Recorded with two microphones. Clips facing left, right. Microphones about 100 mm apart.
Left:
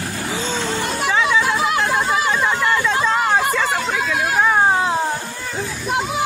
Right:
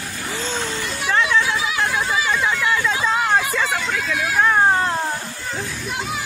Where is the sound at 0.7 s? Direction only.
55° left (ahead or behind).